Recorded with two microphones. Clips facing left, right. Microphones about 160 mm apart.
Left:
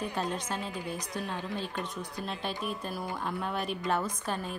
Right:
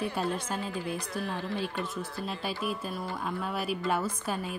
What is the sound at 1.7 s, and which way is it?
A woman's voice, 5° right (ahead or behind).